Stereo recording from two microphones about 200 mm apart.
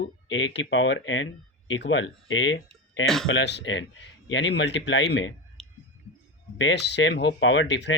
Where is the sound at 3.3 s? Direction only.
60° left (ahead or behind).